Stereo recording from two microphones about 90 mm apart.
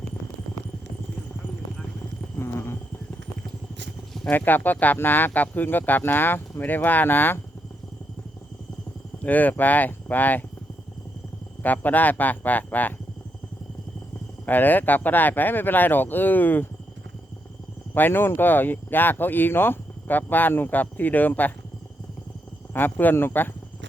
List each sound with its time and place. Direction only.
2.4 s insect: 30° left (ahead or behind)
4.3 s speech: 20° left (ahead or behind)
9.2 s speech: 20° left (ahead or behind)
11.6 s speech: 20° left (ahead or behind)
14.4 s speech: 20° left (ahead or behind)
17.9 s speech: 25° left (ahead or behind)
22.7 s speech: 20° left (ahead or behind)